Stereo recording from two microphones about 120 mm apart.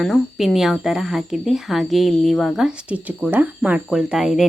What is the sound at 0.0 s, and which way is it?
Speech, centre (ahead or behind).